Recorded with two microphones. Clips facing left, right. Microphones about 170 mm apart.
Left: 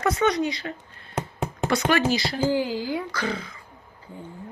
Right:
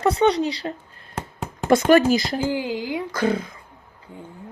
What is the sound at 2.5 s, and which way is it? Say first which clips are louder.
Speech: left 1 dB; 20° right (ahead or behind).